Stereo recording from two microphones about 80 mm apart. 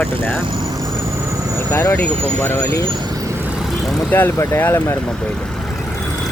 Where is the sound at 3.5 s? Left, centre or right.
Centre.